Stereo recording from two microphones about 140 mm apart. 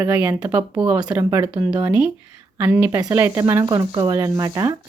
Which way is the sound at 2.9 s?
25° right (ahead or behind).